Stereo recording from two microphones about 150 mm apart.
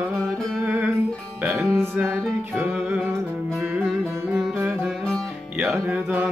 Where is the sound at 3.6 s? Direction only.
Centre (ahead or behind).